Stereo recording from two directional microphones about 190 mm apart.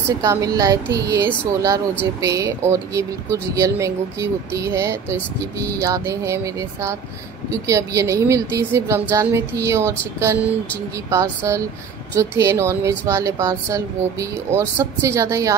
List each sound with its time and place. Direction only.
0.2 s speech: 15° right (ahead or behind)